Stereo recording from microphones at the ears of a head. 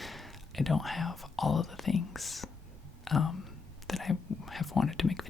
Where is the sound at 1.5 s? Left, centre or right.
Left.